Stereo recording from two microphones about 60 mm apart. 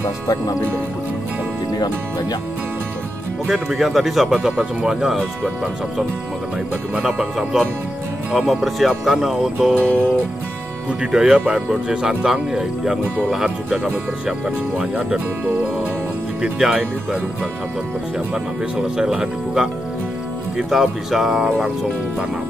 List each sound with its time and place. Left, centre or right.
3.4 s speech: centre
7.0 s speech: centre
9.8 s music: centre
10.9 s speech: centre
16.5 s speech: centre
18.3 s speech: centre